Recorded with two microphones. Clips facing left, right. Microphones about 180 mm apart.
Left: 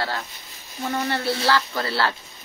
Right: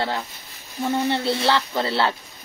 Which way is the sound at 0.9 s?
20° right (ahead or behind).